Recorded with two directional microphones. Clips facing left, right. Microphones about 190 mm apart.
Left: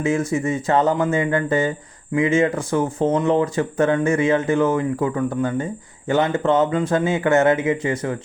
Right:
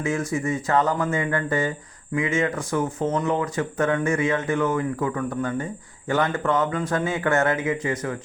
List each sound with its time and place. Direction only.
0.0 s speech: 25° left (ahead or behind)